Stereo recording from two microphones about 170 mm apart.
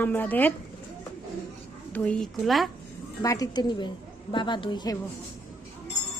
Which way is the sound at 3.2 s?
20° left (ahead or behind).